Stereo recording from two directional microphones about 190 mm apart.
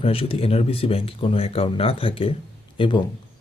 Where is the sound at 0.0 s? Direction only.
30° left (ahead or behind).